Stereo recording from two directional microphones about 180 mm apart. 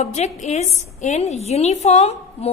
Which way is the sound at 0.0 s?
40° left (ahead or behind).